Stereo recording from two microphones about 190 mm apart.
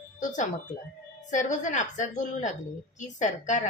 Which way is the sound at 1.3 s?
40° left (ahead or behind).